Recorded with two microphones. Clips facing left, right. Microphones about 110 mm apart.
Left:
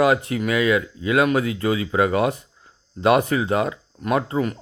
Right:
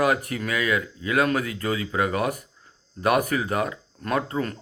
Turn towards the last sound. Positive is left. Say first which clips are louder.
# left 4 dB
turn(degrees=15)  # may be behind; listen again after turning